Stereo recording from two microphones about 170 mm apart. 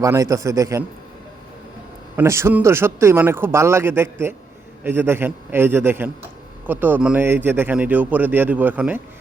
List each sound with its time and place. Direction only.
0.0 s a man's voice: 20° right (ahead or behind)
2.1 s speech: 15° right (ahead or behind)